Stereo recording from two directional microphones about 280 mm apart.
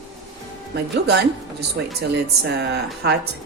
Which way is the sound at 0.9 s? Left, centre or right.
Right.